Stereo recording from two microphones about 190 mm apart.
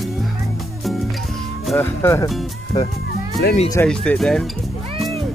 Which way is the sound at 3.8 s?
5° left (ahead or behind).